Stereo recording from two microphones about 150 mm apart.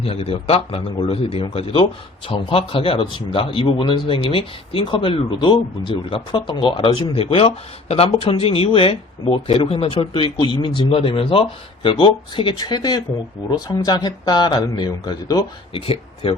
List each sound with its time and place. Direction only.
0.0 s speech: 40° left (ahead or behind)
15.7 s speech: 35° left (ahead or behind)